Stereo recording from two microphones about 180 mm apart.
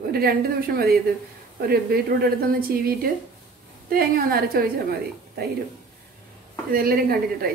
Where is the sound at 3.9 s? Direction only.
55° right (ahead or behind).